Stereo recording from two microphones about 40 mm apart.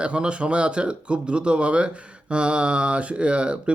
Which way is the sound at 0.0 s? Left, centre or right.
Right.